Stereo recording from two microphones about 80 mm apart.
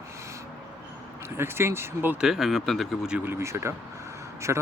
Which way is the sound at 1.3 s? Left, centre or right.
Right.